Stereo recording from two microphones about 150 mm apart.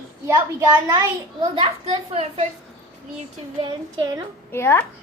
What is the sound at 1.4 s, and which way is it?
A child's voice, 40° right (ahead or behind).